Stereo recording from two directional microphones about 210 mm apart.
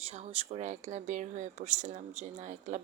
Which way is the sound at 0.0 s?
30° right (ahead or behind).